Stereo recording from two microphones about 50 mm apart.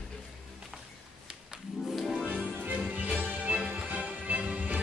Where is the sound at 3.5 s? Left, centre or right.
Centre.